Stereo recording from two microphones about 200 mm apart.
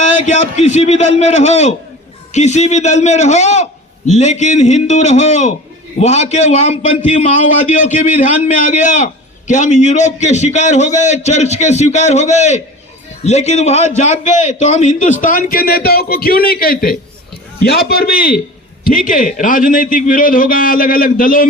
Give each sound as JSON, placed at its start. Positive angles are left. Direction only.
{"t": 0.0, "sound": "a man's voice", "side_deg": 35}